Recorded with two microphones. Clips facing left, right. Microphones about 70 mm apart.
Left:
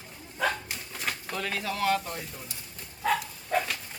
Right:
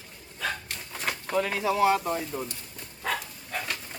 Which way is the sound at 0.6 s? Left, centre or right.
Centre.